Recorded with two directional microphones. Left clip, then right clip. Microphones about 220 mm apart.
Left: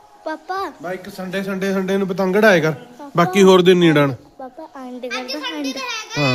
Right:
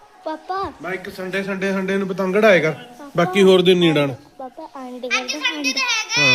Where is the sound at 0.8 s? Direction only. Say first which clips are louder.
Right 1 dB; 45° left (ahead or behind).